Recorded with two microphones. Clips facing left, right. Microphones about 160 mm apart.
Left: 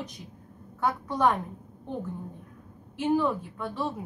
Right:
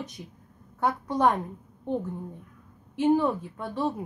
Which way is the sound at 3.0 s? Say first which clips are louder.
Right 3 dB; 20° right (ahead or behind).